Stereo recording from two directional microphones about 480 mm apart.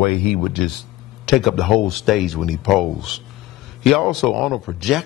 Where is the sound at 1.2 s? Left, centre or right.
Centre.